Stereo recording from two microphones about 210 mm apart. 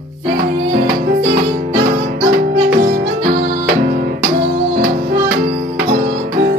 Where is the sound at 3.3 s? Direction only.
40° right (ahead or behind).